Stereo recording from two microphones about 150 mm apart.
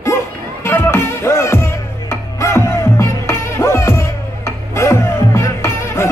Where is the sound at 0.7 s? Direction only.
15° left (ahead or behind).